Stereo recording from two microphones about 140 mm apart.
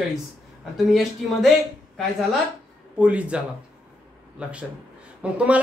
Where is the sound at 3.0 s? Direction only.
10° right (ahead or behind).